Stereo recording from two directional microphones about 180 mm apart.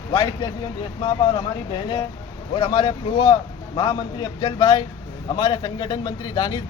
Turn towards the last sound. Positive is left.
turn(degrees=20)  # may be behind; listen again after turning